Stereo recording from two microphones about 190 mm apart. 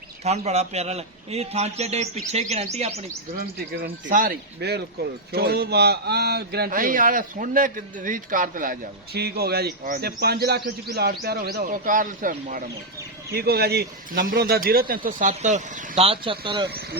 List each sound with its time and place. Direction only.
0.3 s a man's voice: 35° right (ahead or behind)
3.8 s a man's voice: 50° right (ahead or behind)
15.3 s a man's voice: 40° right (ahead or behind)
16.6 s a man's voice: 60° right (ahead or behind)